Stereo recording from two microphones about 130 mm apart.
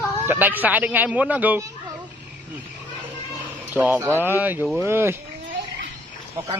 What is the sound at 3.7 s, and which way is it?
A man's voice, 10° right (ahead or behind).